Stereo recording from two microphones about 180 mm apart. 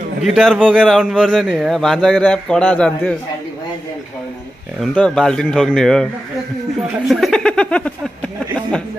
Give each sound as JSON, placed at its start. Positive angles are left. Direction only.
{"t": 0.2, "sound": "a man's voice", "side_deg": 0}
{"t": 4.9, "sound": "a man's voice", "side_deg": 5}
{"t": 7.1, "sound": "speech", "side_deg": 0}